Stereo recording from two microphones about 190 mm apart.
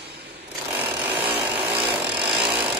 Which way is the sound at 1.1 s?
30° right (ahead or behind).